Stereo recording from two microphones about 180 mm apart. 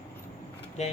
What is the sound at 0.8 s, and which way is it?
Speech, 40° left (ahead or behind).